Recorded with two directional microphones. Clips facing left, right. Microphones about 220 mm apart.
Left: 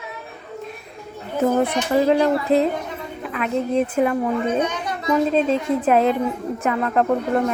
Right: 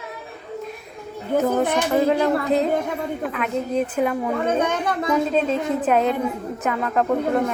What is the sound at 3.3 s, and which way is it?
Speech, centre (ahead or behind).